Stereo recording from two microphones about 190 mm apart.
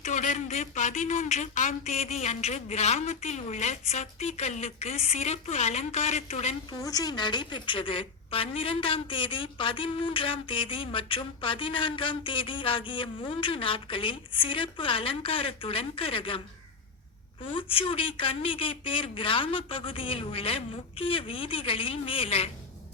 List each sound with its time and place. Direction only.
0.0 s a man's voice: 40° left (ahead or behind)
6.7 s a woman's voice: 20° left (ahead or behind)
17.4 s a woman's voice: 25° left (ahead or behind)